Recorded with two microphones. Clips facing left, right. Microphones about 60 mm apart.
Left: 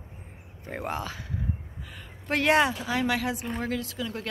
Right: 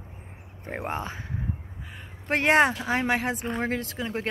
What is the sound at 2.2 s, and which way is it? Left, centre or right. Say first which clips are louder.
Speech: right 2 dB; right.